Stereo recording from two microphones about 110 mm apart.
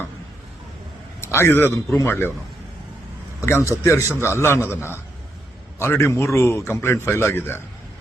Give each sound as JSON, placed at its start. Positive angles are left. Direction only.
{"t": 1.2, "sound": "a man's voice", "side_deg": 25}
{"t": 3.4, "sound": "a man's voice", "side_deg": 25}